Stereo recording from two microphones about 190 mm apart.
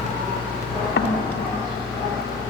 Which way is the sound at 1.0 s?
60° left (ahead or behind).